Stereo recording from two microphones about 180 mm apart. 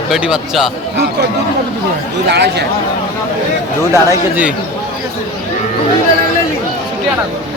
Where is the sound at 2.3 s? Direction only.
65° right (ahead or behind).